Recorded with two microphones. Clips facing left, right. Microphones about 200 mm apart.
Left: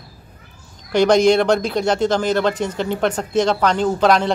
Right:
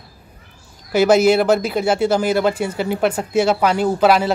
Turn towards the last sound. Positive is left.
turn(degrees=-5)  # may be behind; listen again after turning